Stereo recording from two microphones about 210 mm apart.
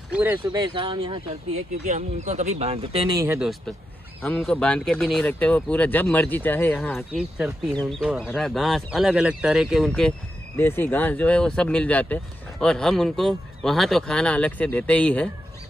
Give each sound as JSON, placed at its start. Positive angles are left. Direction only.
{"t": 0.1, "sound": "speech", "side_deg": -10}
{"t": 0.5, "sound": "speech", "side_deg": -25}
{"t": 3.3, "sound": "speech", "side_deg": 0}
{"t": 7.1, "sound": "speech", "side_deg": -5}